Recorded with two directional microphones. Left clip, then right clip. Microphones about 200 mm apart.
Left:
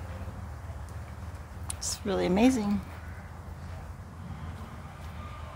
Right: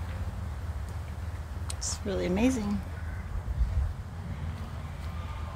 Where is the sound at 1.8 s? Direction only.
25° left (ahead or behind).